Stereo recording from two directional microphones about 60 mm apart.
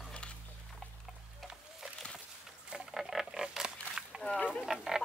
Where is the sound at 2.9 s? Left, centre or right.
Centre.